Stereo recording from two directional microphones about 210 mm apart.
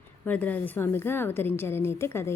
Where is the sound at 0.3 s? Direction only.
5° left (ahead or behind).